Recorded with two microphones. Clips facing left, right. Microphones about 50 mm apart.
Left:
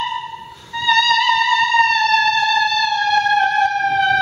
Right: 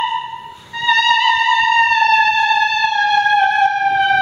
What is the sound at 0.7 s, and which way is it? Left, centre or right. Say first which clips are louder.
Music: right 1 dB; centre.